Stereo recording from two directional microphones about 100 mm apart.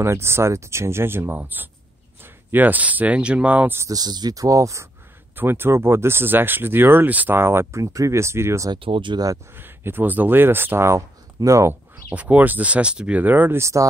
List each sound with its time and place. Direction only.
0.0 s speech: 25° right (ahead or behind)
3.9 s speech: 40° right (ahead or behind)
5.3 s speech: 20° right (ahead or behind)
8.7 s speech: 60° right (ahead or behind)
9.6 s speech: 20° right (ahead or behind)
12.1 s speech: 15° right (ahead or behind)
13.6 s speech: 30° right (ahead or behind)